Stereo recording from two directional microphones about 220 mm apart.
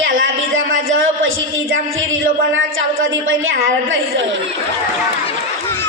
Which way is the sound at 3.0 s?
60° right (ahead or behind).